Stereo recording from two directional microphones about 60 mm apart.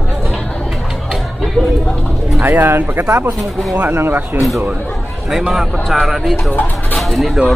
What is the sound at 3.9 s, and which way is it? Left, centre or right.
Speech, right.